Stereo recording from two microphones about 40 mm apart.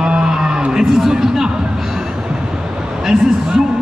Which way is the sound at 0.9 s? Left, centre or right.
Centre.